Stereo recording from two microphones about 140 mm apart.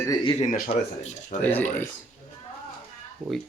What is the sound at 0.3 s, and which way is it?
Speech, 75° left (ahead or behind).